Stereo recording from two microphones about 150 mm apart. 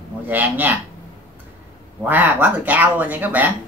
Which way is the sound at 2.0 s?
10° right (ahead or behind).